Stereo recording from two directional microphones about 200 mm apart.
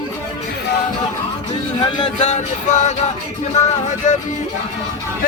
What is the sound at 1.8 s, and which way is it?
Speech, 30° left (ahead or behind).